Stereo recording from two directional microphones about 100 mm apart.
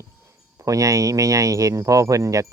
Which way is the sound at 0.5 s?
35° right (ahead or behind).